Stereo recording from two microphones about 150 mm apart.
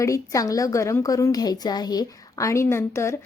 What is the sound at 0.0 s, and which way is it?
A woman's voice, 20° left (ahead or behind).